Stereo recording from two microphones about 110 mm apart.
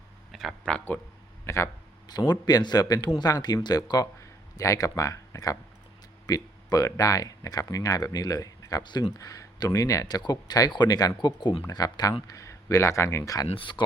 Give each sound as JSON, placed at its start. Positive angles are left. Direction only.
{"t": 0.3, "sound": "a sound", "side_deg": 0}
{"t": 1.5, "sound": "speech", "side_deg": 25}
{"t": 2.0, "sound": "speech", "side_deg": 40}
{"t": 13.5, "sound": "speech", "side_deg": 50}